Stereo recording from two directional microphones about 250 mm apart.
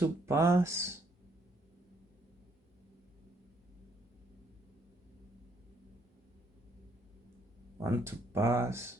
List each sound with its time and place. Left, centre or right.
0.0 s speech: centre
7.9 s speech: centre